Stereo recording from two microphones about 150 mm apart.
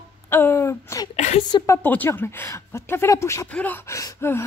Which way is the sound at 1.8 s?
15° left (ahead or behind).